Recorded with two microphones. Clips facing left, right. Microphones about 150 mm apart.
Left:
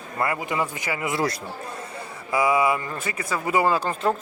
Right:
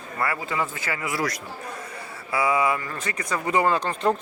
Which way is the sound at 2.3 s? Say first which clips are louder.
Left 2 dB; 10° left (ahead or behind).